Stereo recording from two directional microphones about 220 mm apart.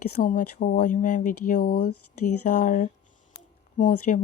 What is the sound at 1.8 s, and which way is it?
Speech, 90° left.